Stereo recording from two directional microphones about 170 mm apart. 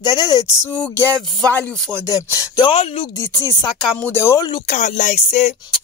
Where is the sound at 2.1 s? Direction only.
25° left (ahead or behind).